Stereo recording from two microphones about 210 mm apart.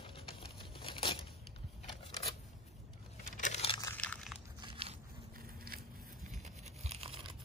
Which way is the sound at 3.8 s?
10° left (ahead or behind).